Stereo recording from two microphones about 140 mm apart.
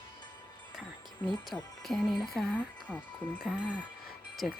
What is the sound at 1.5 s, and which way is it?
Speech, 15° left (ahead or behind).